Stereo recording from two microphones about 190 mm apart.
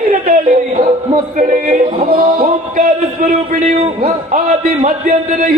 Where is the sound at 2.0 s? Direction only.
50° right (ahead or behind).